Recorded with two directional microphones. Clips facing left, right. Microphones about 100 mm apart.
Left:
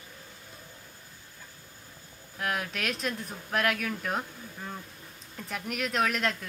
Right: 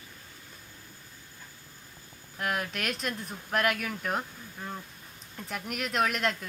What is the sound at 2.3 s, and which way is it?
A woman's voice, centre (ahead or behind).